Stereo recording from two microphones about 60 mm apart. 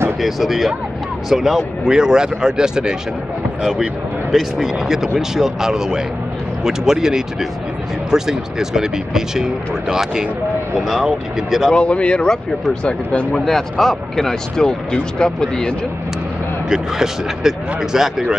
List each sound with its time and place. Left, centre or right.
0.2 s speech: centre
4.3 s speech: centre
11.7 s speech: centre
13.5 s speech: centre
16.6 s speech: centre